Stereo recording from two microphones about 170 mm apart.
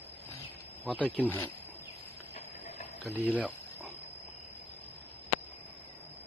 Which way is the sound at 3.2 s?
10° right (ahead or behind).